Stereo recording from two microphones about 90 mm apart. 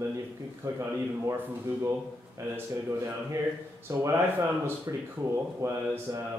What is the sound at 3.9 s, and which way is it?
Speech, 30° right (ahead or behind).